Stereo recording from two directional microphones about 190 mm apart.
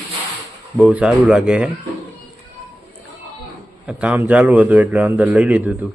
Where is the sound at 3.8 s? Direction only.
5° right (ahead or behind).